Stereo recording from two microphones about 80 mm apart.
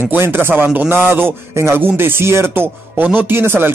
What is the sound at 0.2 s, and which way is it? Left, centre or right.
Speech, right.